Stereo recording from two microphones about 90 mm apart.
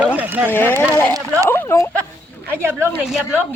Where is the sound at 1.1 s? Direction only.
35° right (ahead or behind).